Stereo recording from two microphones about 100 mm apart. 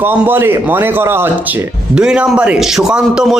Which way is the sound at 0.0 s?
20° right (ahead or behind).